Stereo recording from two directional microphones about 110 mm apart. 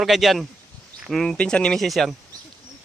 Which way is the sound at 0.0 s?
Centre (ahead or behind).